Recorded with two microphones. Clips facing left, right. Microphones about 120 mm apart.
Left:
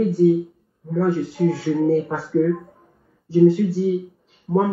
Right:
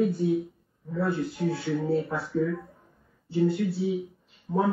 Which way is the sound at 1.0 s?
90° left.